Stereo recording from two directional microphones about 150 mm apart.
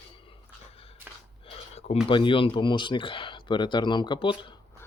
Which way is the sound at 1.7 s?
45° left (ahead or behind).